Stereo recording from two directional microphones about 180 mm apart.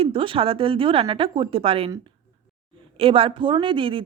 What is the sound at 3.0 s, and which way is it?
Speech, 30° right (ahead or behind).